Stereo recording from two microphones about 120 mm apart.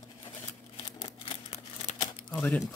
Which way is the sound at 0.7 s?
50° left (ahead or behind).